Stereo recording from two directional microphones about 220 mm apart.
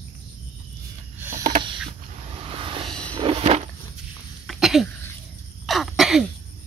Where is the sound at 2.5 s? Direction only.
25° right (ahead or behind).